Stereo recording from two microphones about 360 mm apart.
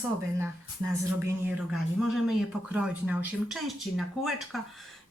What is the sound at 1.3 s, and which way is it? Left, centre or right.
Speech, centre.